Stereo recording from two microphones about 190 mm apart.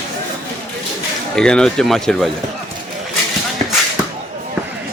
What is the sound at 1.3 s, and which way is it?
Speech, 5° left (ahead or behind).